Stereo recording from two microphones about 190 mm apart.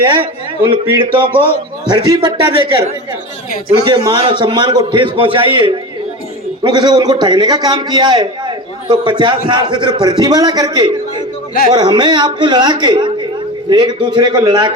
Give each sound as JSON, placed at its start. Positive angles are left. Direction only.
{"t": 0.0, "sound": "a man's voice", "side_deg": -25}
{"t": 3.8, "sound": "a man's voice", "side_deg": -25}